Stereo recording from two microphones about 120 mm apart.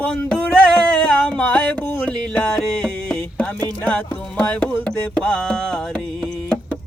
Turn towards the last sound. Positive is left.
turn(degrees=5)  # may be behind; listen again after turning